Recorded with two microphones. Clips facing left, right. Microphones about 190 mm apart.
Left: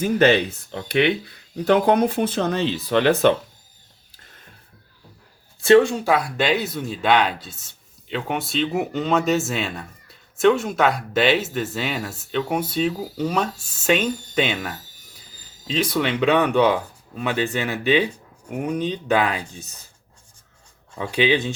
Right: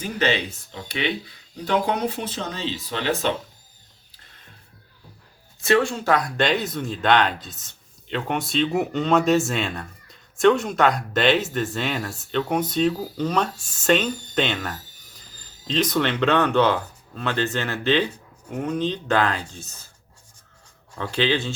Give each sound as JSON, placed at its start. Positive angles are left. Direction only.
{"t": 0.0, "sound": "speech", "side_deg": 50}
{"t": 5.6, "sound": "speech", "side_deg": 20}
{"t": 20.9, "sound": "speech", "side_deg": 10}